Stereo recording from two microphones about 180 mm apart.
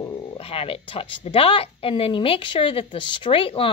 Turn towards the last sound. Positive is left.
turn(degrees=30)  # may be behind; listen again after turning